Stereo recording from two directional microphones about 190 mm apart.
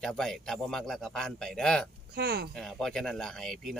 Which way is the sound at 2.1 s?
55° right (ahead or behind).